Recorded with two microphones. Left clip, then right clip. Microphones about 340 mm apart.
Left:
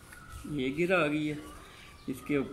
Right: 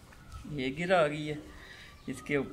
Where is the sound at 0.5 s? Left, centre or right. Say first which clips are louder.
Right 1 dB; right.